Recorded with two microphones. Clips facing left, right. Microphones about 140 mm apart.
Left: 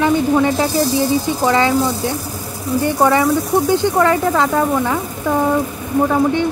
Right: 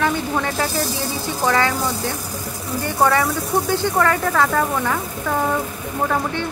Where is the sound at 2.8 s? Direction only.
20° left (ahead or behind).